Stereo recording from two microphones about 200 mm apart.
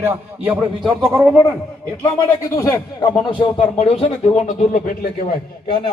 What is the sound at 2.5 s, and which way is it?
Speech, 15° left (ahead or behind).